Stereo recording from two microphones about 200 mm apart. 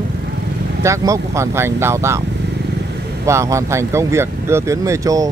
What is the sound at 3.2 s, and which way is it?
Speech, 15° right (ahead or behind).